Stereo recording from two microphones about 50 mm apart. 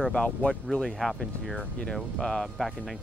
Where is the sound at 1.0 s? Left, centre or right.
Centre.